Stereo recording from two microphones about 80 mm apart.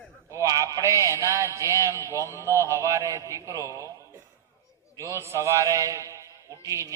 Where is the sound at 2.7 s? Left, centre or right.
Right.